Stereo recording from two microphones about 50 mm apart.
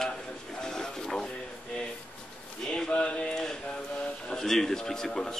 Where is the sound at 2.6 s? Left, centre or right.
Centre.